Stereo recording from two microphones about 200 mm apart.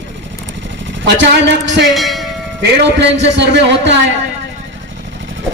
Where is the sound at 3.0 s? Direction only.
60° right (ahead or behind).